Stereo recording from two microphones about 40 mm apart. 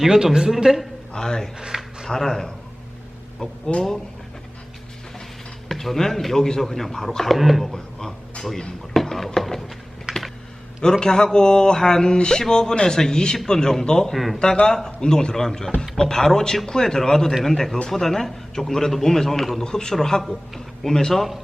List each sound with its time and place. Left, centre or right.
0.0 s a man's voice: centre
1.1 s speech: centre
1.5 s a sound: centre
2.0 s speech: centre
3.7 s speech: centre
5.6 s speech: centre
7.7 s speech: centre
8.9 s a sound: centre
10.1 s computer keyboard: centre
11.0 s speech: centre
14.1 s speech: centre
14.6 s speech: centre